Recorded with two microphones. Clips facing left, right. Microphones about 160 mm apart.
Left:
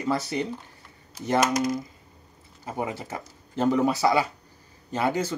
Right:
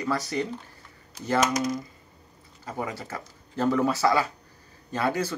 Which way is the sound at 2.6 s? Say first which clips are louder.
Left 2 dB; 20° left (ahead or behind).